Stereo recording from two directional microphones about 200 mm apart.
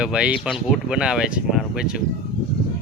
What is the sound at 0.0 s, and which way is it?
Speech, 5° right (ahead or behind).